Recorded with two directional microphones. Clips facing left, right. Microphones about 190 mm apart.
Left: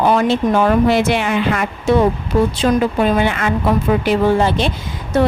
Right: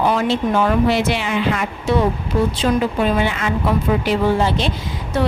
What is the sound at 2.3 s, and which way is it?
Speech, 65° left (ahead or behind).